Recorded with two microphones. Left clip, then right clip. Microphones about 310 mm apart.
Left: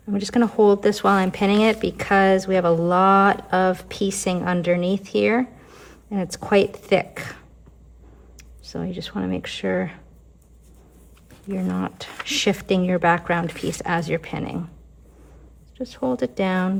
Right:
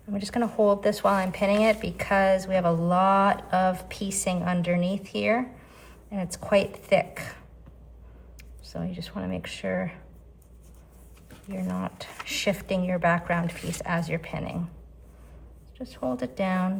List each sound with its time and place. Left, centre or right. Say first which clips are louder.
0.1 s speech: left 7 dB; left
11.5 s speech: left 6 dB; left
15.8 s speech: left 7 dB; left